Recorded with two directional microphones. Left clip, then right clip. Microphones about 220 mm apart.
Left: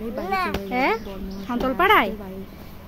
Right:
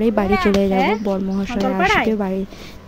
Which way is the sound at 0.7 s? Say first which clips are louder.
Right 5 dB; 10° left (ahead or behind).